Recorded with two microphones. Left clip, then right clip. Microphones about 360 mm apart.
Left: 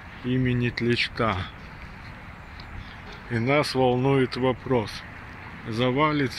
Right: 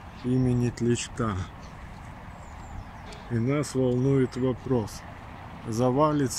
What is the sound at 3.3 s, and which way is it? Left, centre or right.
Speech, left.